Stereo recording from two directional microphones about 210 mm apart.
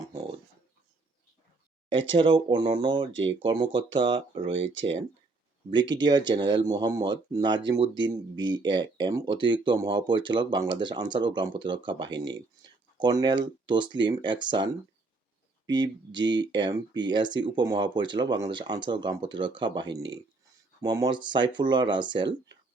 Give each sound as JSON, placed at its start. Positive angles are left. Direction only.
{"t": 0.1, "sound": "dog", "side_deg": -20}
{"t": 2.1, "sound": "speech", "side_deg": -25}
{"t": 4.5, "sound": "speech", "side_deg": -60}
{"t": 5.7, "sound": "speech", "side_deg": -20}
{"t": 19.9, "sound": "speech", "side_deg": -60}
{"t": 20.8, "sound": "speech", "side_deg": -20}